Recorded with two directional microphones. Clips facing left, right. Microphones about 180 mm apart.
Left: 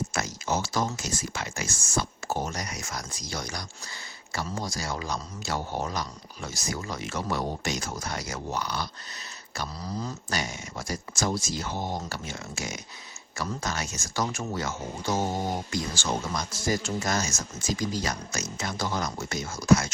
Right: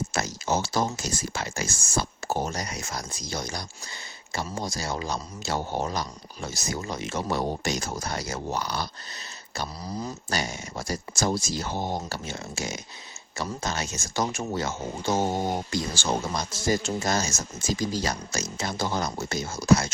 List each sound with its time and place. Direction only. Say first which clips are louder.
0.1 s a sound: right 2 dB; 30° right (ahead or behind)
0.9 s speech: right 2 dB; 35° right (ahead or behind)
9.8 s speech: left 1 dB; 10° right (ahead or behind)
10.2 s speech: right 2 dB; 30° right (ahead or behind)